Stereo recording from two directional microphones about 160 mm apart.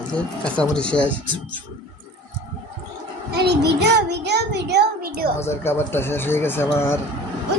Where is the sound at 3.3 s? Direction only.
90° right; by 5.3 s 70° right (ahead or behind).